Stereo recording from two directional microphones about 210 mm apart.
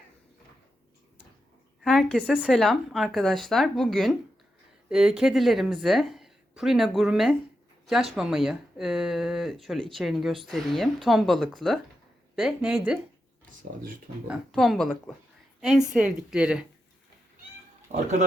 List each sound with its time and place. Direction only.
1.8 s a sound: 5° left (ahead or behind)
2.1 s speech: 5° right (ahead or behind)
14.3 s speech: centre (ahead or behind)
17.9 s speech: 35° right (ahead or behind)